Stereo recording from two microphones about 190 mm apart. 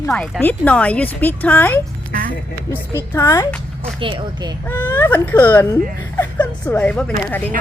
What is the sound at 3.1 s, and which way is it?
Speech, 15° left (ahead or behind).